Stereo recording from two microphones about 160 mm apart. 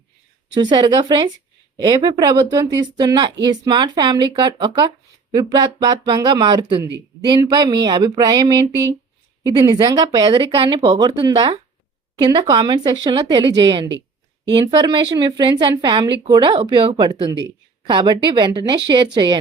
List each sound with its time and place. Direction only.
0.6 s speech: 25° right (ahead or behind)